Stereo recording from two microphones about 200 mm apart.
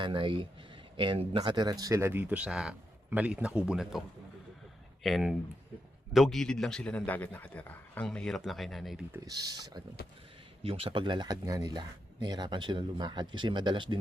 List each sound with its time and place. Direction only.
0.0 s a man's voice: 25° right (ahead or behind); by 4.0 s 5° right (ahead or behind)
5.0 s a man's voice: centre (ahead or behind)
9.2 s speech: 20° right (ahead or behind)